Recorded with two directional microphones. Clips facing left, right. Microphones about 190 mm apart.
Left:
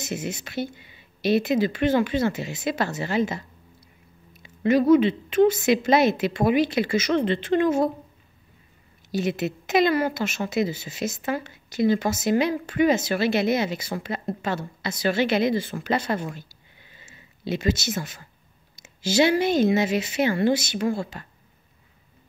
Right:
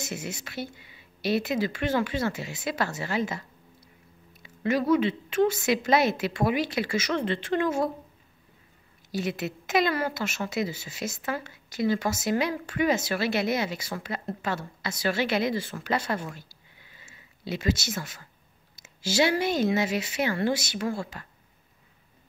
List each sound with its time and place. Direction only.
0.0 s a woman's voice: 20° left (ahead or behind)
9.1 s a woman's voice: 20° left (ahead or behind)
17.5 s a woman's voice: 20° left (ahead or behind)